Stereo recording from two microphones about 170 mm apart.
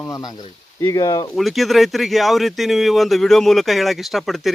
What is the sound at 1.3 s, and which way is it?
Speech, centre (ahead or behind).